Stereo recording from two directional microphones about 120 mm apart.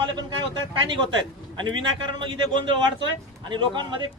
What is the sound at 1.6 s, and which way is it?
A man's voice, 40° right (ahead or behind).